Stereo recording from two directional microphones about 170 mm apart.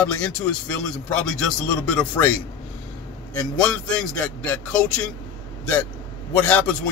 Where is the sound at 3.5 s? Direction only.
5° left (ahead or behind).